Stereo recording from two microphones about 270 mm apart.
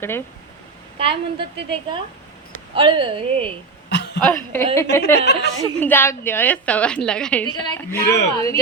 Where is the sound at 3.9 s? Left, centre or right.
Left.